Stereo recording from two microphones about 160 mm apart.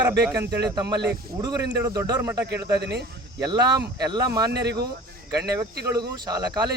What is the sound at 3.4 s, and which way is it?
Speech, 25° right (ahead or behind).